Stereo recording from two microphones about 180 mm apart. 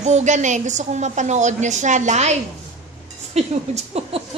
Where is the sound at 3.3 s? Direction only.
35° right (ahead or behind).